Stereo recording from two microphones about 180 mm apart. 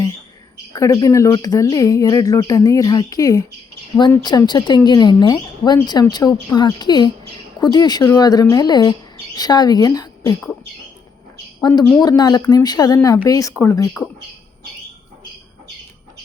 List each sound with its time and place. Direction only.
0.7 s speech: 20° left (ahead or behind)
11.6 s speech: 20° left (ahead or behind)